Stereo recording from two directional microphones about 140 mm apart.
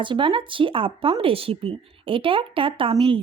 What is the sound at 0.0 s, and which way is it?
Speech, 35° right (ahead or behind).